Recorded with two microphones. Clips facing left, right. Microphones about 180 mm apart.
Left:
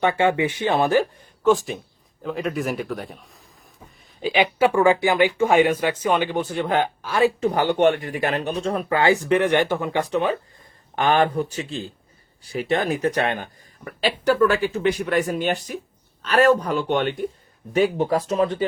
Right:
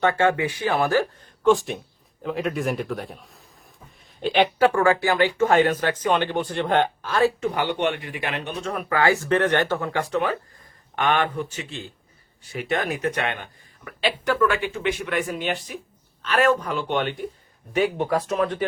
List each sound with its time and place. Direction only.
0.0 s speech: 15° left (ahead or behind)
1.5 s a man's voice: centre (ahead or behind)
4.5 s speech: 15° left (ahead or behind)
7.4 s speech: 40° left (ahead or behind); by 10.3 s 20° left (ahead or behind)
10.9 s speech: 35° left (ahead or behind)